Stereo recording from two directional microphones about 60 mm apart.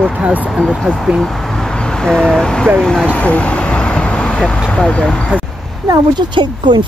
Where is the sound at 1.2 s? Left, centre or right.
Centre.